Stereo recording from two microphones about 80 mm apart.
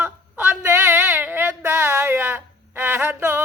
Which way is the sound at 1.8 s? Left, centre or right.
Right.